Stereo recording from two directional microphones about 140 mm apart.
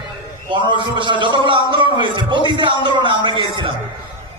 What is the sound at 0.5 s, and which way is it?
A man's voice, 35° right (ahead or behind).